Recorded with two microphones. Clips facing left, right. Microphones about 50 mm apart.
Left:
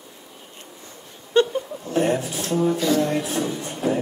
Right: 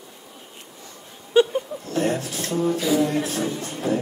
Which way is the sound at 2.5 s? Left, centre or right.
Centre.